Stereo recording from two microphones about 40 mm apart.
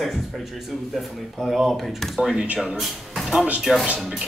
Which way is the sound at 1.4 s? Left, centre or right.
Centre.